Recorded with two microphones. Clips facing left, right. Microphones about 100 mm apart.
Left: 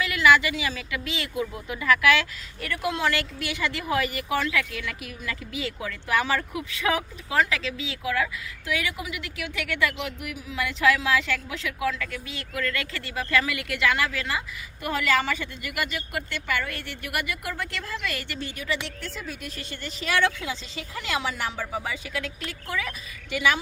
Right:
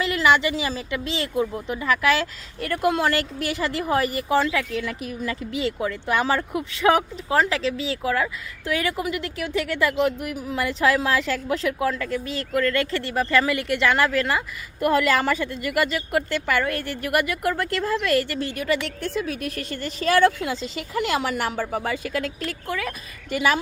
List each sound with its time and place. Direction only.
0.0 s speech: 30° right (ahead or behind)
14.8 s a woman's voice: 50° right (ahead or behind)
19.0 s a woman's voice: 65° right (ahead or behind)
19.7 s a woman's voice: 40° right (ahead or behind)